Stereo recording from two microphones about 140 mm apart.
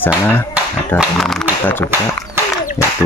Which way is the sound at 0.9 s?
Centre (ahead or behind).